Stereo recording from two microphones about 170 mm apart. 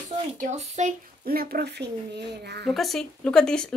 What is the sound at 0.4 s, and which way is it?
Speech, 40° right (ahead or behind).